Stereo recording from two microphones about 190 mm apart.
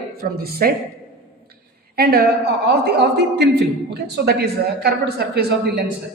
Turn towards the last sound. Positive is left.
turn(degrees=-60)  # may be behind; listen again after turning